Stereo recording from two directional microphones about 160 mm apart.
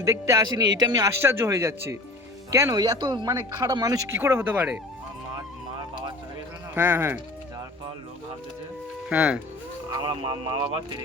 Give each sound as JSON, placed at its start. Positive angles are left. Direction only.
{"t": 0.0, "sound": "speech", "side_deg": -20}
{"t": 6.7, "sound": "speech", "side_deg": -15}
{"t": 9.0, "sound": "speech", "side_deg": -10}
{"t": 9.9, "sound": "speech", "side_deg": -25}